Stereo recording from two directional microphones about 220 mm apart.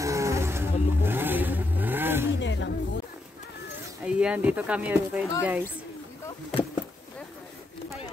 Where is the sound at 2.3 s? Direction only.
55° left (ahead or behind).